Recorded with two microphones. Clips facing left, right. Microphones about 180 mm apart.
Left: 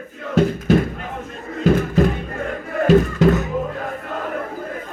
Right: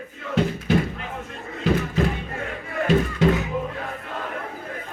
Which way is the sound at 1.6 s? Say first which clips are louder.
Left 6 dB; 45° left (ahead or behind).